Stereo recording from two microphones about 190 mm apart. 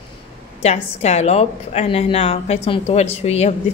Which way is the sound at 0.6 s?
35° left (ahead or behind).